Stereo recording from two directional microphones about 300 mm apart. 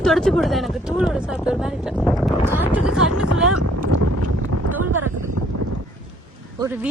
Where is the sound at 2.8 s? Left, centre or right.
Right.